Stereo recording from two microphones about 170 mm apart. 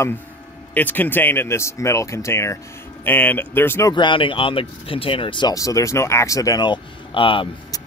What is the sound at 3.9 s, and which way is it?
Speech, 30° left (ahead or behind).